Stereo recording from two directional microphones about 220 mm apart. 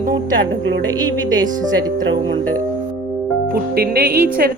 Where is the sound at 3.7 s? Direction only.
45° right (ahead or behind).